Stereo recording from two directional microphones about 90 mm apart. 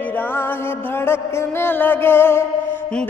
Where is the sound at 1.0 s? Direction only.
25° left (ahead or behind).